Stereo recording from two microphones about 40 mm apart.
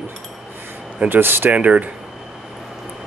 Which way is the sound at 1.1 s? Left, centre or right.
Right.